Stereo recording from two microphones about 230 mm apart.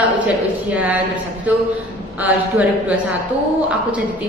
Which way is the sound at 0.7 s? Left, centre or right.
Centre.